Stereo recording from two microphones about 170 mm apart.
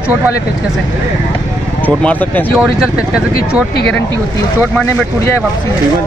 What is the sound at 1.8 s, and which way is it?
Speech, 10° left (ahead or behind).